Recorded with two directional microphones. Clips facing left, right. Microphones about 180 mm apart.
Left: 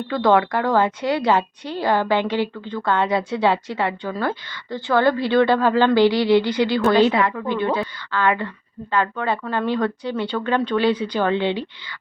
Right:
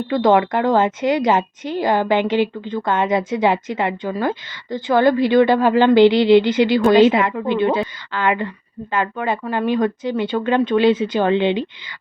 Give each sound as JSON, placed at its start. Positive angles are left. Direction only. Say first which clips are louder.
{"t": 0.1, "sound": "a woman's voice", "louder": "right 2 dB", "side_deg": -20}